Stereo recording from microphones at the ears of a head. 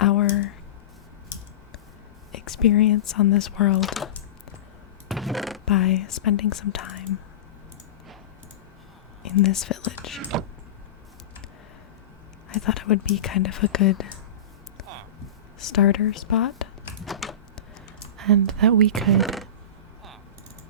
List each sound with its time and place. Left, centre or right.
0.0 s a sound: left
2.3 s speech: left
5.0 s a sound: centre
5.6 s speech: left
9.2 s whispering: left
12.5 s speech: left
15.6 s speech: left
18.2 s speech: right